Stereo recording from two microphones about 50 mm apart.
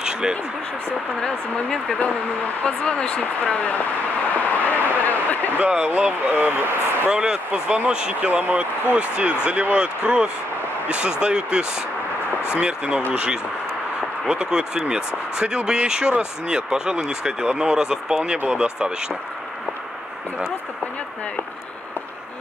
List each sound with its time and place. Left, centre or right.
0.0 s a sound: centre
1.2 s a woman's voice: centre
2.6 s speech: left
4.3 s vehicle: left
4.8 s speech: left
5.6 s speech: right
6.3 s speech: right
7.1 s speech: centre
8.2 s speech: right
8.9 s speech: right
12.6 s speech: centre